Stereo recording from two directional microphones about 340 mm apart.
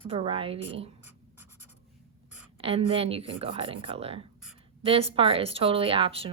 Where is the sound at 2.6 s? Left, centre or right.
Centre.